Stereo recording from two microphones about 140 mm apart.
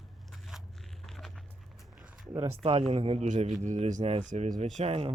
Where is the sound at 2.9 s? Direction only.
45° right (ahead or behind).